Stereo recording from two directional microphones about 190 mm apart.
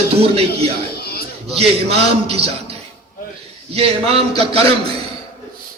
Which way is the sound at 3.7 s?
30° right (ahead or behind).